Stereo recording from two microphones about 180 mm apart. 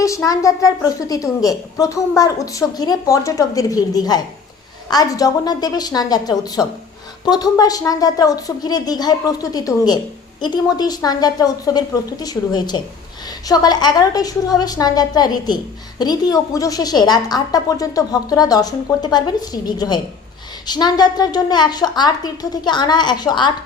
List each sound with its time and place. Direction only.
0.0 s a woman's voice: 15° left (ahead or behind)